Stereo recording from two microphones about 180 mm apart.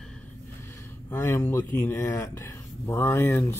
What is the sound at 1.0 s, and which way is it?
Speech, 10° left (ahead or behind).